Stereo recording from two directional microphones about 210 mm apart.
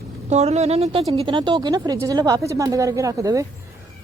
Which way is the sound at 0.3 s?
30° right (ahead or behind).